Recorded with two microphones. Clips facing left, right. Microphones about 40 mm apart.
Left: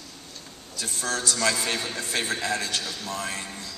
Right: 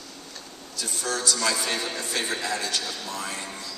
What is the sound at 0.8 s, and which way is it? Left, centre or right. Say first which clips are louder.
Speech: even; left.